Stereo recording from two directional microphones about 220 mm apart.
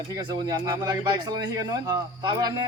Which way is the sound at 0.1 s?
20° right (ahead or behind).